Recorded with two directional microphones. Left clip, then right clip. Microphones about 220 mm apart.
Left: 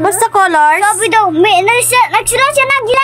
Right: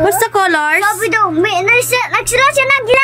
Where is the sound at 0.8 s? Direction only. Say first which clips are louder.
Left 3 dB; 10° left (ahead or behind).